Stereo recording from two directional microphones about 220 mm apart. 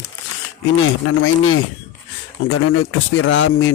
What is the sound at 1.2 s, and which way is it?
Speech, 65° left (ahead or behind).